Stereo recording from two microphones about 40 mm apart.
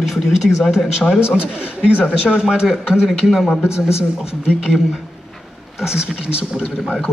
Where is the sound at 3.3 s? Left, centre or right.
Centre.